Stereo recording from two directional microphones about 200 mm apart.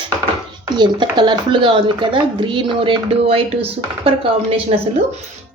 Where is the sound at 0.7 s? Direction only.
25° right (ahead or behind).